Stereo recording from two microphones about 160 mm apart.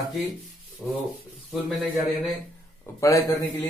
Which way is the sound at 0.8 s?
Centre (ahead or behind).